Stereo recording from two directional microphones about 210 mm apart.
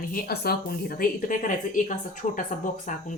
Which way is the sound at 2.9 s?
35° left (ahead or behind).